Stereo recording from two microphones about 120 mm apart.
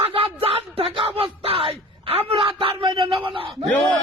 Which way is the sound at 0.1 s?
50° right (ahead or behind).